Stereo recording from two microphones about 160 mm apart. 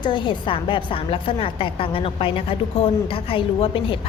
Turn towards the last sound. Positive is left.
turn(degrees=35)  # may be behind; listen again after turning